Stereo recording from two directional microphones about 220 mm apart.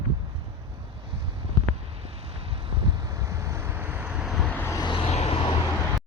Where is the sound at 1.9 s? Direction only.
25° right (ahead or behind); by 5.5 s 25° left (ahead or behind).